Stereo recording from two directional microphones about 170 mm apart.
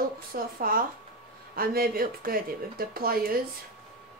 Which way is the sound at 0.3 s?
55° right (ahead or behind).